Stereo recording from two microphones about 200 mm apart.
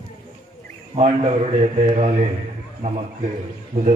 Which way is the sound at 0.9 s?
35° right (ahead or behind).